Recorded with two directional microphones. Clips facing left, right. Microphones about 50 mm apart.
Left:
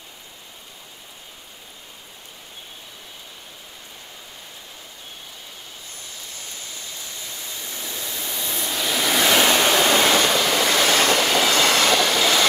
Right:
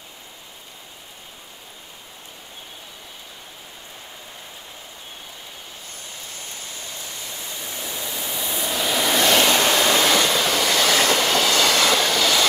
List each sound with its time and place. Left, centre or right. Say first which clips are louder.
7.5 s waves: right 2 dB; centre
9.8 s train: left 1 dB; left
11.1 s train: left 1 dB; centre
11.5 s train: even; left
12.0 s train: left 1 dB; centre